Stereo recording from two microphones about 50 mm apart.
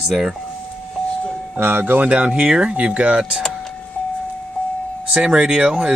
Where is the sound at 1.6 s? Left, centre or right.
Right.